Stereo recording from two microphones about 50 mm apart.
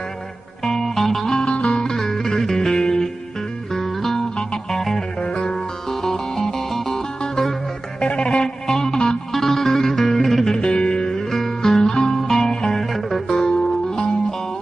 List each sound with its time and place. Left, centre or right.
0.7 s music: centre
9.3 s music: centre